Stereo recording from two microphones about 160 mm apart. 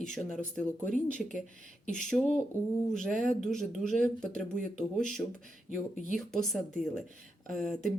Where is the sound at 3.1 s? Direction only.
55° right (ahead or behind).